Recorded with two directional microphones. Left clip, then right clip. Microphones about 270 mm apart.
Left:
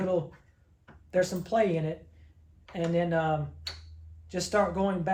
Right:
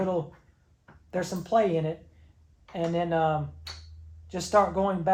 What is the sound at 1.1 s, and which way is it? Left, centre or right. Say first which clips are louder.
Speech: right 1 dB; centre.